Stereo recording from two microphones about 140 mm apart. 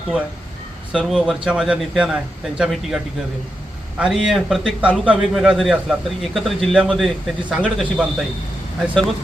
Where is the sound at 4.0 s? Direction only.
5° right (ahead or behind).